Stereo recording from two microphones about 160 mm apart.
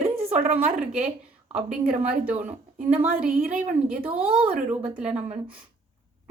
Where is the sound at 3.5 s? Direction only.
50° right (ahead or behind).